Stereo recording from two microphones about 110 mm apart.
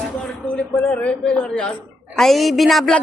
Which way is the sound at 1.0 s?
10° left (ahead or behind).